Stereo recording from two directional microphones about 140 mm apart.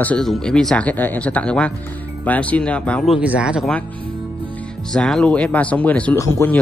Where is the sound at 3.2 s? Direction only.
10° right (ahead or behind).